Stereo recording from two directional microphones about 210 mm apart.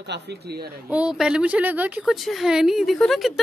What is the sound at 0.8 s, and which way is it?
Speech, 5° right (ahead or behind).